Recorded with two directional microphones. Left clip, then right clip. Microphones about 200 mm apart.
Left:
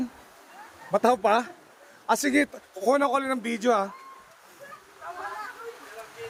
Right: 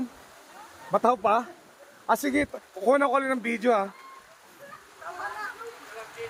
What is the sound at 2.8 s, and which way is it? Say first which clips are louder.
A man's voice: right 1 dB; 5° left (ahead or behind).